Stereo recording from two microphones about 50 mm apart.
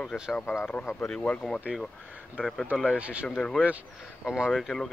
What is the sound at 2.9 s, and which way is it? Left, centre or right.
Speech, right.